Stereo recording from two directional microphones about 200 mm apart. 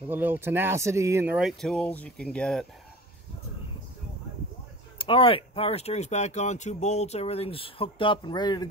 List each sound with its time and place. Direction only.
0.1 s speech: 10° right (ahead or behind)
4.9 s speech: 25° left (ahead or behind)